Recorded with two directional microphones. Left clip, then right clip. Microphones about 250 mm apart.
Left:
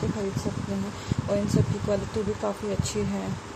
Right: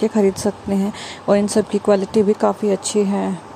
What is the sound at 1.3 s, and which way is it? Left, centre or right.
Speech, right.